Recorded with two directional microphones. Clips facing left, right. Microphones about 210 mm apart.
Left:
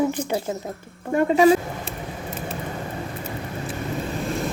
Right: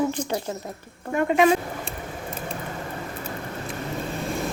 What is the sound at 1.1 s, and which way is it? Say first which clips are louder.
Speech: left 3 dB; 30° left (ahead or behind).